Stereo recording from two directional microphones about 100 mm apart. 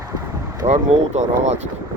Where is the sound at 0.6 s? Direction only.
45° right (ahead or behind).